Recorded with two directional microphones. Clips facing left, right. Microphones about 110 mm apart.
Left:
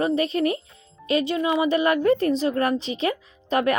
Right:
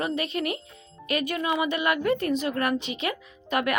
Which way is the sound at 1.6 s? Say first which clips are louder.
Left 5 dB; 35° left (ahead or behind).